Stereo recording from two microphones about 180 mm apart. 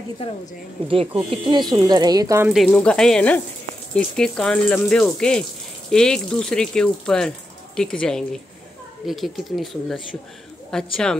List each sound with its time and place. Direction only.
1.3 s speech: 25° right (ahead or behind)
2.5 s speech: 5° left (ahead or behind)